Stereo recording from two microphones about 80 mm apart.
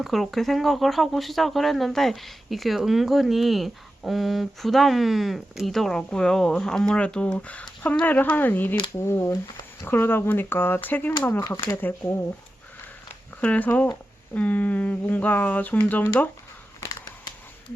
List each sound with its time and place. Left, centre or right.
0.0 s speech: centre; by 8.8 s left
9.0 s speech: left
11.3 s speech: left
11.8 s speech: left
13.4 s speech: left
16.8 s a sound: left